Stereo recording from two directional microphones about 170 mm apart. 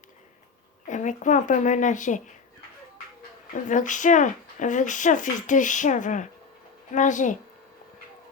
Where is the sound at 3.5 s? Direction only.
50° left (ahead or behind).